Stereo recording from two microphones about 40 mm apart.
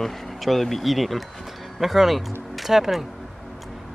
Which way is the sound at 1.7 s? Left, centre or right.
Centre.